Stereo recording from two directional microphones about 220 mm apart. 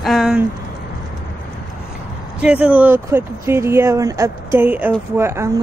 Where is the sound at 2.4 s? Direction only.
5° right (ahead or behind).